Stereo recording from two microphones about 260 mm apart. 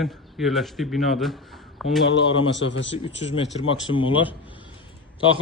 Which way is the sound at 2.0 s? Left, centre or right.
Left.